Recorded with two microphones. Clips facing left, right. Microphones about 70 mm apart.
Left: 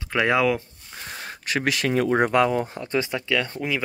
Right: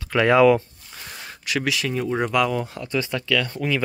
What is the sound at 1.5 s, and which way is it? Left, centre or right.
Speech, left.